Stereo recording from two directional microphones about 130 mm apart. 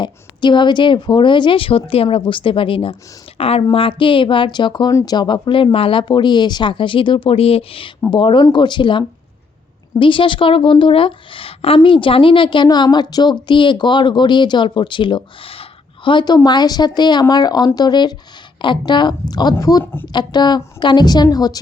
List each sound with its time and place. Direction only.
0.0 s speech: 35° left (ahead or behind)
19.8 s speech: 15° left (ahead or behind)
20.1 s speech: 35° left (ahead or behind)